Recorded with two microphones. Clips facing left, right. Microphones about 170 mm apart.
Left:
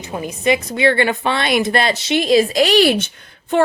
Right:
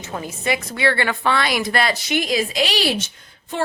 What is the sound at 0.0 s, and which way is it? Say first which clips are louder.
A woman's voice: left 6 dB; 15° left (ahead or behind).